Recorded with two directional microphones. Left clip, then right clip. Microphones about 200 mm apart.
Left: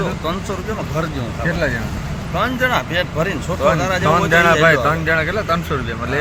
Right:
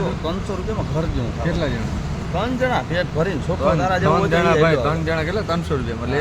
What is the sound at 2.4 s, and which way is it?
Speech, 20° right (ahead or behind).